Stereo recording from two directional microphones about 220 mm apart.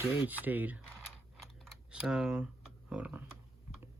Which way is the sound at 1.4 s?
Centre (ahead or behind).